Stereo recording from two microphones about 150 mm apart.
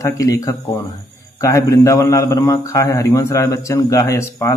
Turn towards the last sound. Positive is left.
turn(degrees=20)  # may be behind; listen again after turning